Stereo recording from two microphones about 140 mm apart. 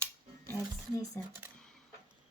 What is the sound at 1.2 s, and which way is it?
Speech, 20° left (ahead or behind).